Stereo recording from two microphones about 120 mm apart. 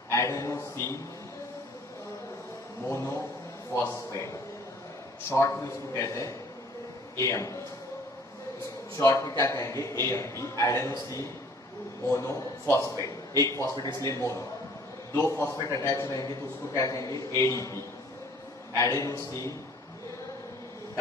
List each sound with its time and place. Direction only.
0.1 s a man's voice: 25° left (ahead or behind)
2.9 s a man's voice: 20° left (ahead or behind)
5.3 s a man's voice: 25° left (ahead or behind)
8.9 s a man's voice: 25° left (ahead or behind)